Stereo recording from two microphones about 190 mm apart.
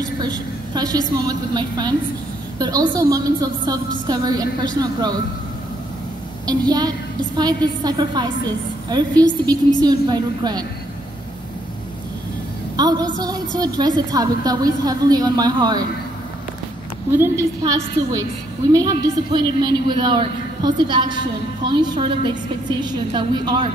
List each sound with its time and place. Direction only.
0.7 s a woman's voice: 20° right (ahead or behind)
6.7 s a woman's voice: 20° right (ahead or behind)
12.7 s a woman's voice: 20° right (ahead or behind)
17.2 s a woman's voice: 15° right (ahead or behind)